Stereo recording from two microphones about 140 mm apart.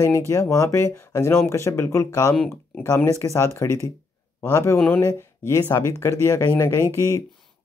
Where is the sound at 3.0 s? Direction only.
20° left (ahead or behind).